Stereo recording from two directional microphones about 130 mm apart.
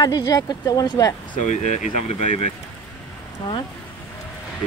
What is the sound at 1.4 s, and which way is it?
Speech, 65° left (ahead or behind).